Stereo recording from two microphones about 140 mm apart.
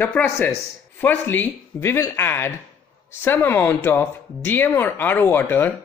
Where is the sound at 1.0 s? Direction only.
15° left (ahead or behind).